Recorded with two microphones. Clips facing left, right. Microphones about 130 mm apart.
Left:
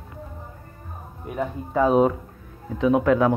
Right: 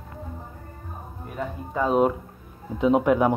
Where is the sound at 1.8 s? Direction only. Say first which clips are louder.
Left 3 dB; centre (ahead or behind).